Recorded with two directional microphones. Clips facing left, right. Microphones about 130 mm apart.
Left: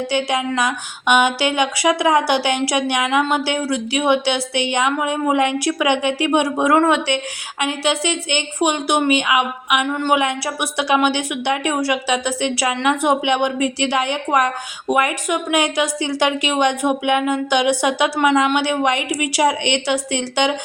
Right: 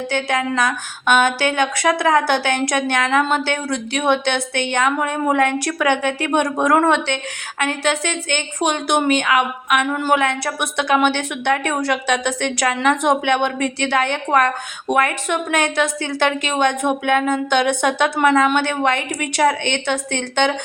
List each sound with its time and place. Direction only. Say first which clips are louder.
0.1 s a woman's voice: right 1 dB; 10° left (ahead or behind)
9.8 s speech: even; 5° right (ahead or behind)
10.2 s a woman's voice: even; 10° left (ahead or behind)